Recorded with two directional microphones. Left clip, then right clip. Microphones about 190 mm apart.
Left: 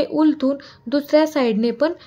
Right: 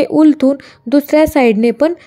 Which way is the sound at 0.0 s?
35° right (ahead or behind).